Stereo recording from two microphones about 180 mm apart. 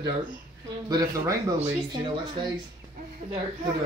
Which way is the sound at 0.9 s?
20° right (ahead or behind).